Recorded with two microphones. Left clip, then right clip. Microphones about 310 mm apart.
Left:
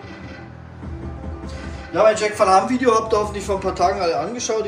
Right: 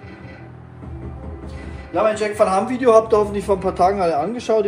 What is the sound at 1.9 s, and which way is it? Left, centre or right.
A man's voice, centre.